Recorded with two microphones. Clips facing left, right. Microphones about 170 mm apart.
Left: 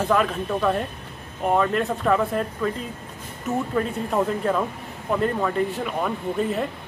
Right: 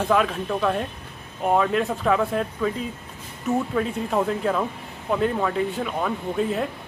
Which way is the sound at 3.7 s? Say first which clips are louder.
Even; centre (ahead or behind).